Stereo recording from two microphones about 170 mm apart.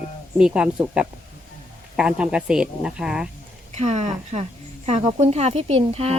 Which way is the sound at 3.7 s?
40° right (ahead or behind).